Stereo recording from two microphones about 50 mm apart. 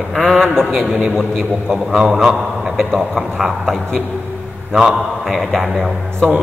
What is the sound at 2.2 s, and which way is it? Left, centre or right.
A man's voice, centre.